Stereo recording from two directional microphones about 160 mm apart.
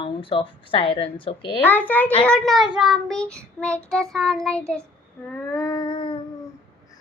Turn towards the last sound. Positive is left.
turn(degrees=30)  # may be behind; listen again after turning